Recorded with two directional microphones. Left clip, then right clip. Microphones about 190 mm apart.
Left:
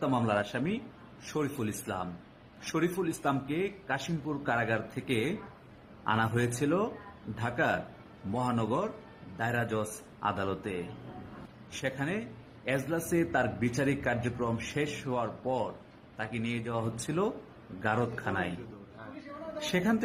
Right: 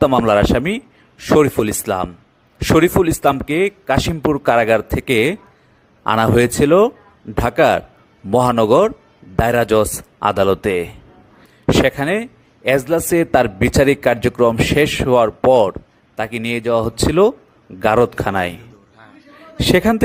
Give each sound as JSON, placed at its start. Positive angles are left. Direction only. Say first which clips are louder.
{"t": 0.0, "sound": "speech", "louder": "right 17 dB", "side_deg": -60}
{"t": 19.5, "sound": "speech", "louder": "right 17 dB", "side_deg": -60}